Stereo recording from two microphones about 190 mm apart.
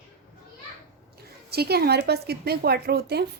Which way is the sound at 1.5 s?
55° right (ahead or behind).